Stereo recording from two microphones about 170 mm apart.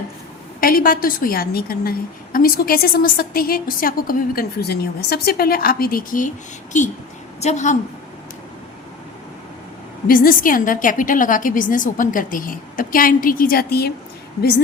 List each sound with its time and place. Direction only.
0.6 s a woman's voice: 55° left (ahead or behind)
10.1 s a woman's voice: 55° left (ahead or behind)